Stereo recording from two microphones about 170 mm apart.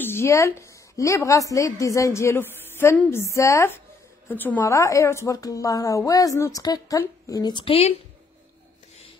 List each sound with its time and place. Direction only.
0.0 s a woman's voice: 15° left (ahead or behind); by 7.9 s 35° left (ahead or behind)